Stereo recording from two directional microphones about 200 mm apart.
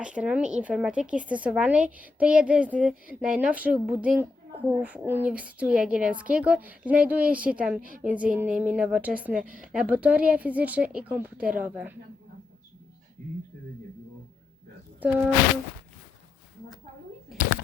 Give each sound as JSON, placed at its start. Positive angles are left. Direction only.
{"t": 0.0, "sound": "a woman's voice", "side_deg": -5}
{"t": 7.8, "sound": "a woman's voice", "side_deg": -45}
{"t": 8.0, "sound": "a woman's voice", "side_deg": -5}
{"t": 15.0, "sound": "a woman's voice", "side_deg": -10}